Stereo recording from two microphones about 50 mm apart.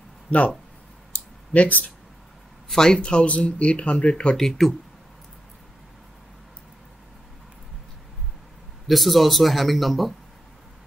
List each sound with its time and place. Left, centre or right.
1.5 s speech: left
2.7 s speech: centre
4.4 s speech: centre
8.8 s speech: centre